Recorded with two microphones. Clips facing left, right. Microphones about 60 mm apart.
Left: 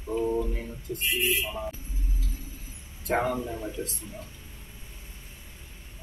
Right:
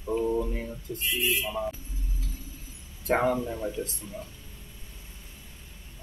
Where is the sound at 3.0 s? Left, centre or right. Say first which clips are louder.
Right 2 dB; right.